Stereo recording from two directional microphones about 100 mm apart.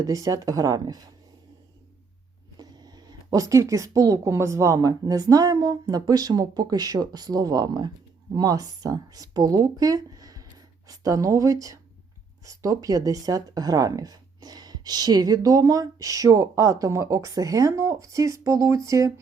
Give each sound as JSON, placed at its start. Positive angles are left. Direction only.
{"t": 0.0, "sound": "speech", "side_deg": -35}
{"t": 2.6, "sound": "speech", "side_deg": -40}